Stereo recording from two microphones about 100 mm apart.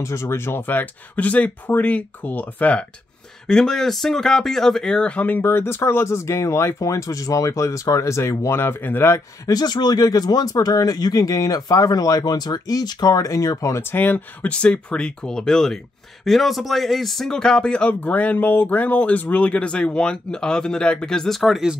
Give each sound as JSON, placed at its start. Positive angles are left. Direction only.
{"t": 0.0, "sound": "speech", "side_deg": 25}
{"t": 9.5, "sound": "speech", "side_deg": 40}